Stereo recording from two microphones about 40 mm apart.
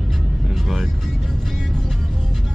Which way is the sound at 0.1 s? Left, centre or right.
Centre.